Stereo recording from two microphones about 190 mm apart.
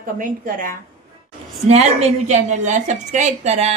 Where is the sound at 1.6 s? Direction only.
35° right (ahead or behind).